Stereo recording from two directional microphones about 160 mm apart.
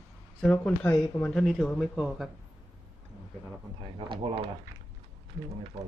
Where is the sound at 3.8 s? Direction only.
30° right (ahead or behind).